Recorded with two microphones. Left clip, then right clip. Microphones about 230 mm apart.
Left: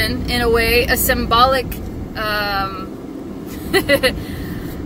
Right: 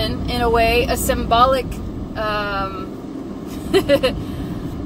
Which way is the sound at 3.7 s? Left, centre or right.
Centre.